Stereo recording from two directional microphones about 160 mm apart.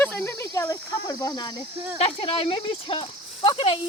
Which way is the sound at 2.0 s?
35° left (ahead or behind).